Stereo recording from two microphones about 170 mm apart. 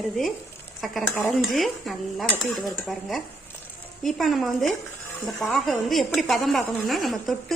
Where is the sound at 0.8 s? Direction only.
Centre (ahead or behind).